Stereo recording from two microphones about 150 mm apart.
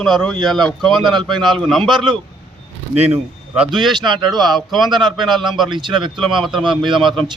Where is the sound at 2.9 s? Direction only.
45° right (ahead or behind).